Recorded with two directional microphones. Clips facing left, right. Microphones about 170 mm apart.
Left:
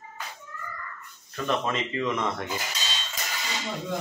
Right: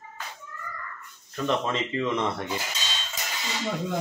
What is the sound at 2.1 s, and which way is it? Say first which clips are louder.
Cutlery: right 1 dB; 30° right (ahead or behind).